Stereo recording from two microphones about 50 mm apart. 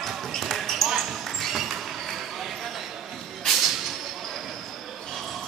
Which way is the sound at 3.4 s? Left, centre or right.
Centre.